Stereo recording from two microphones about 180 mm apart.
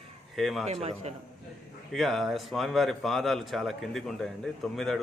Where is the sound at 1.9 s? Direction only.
Centre (ahead or behind).